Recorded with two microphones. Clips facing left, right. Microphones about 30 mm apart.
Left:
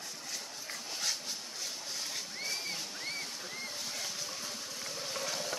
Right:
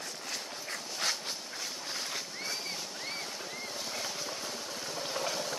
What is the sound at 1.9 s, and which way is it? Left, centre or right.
Boat, right.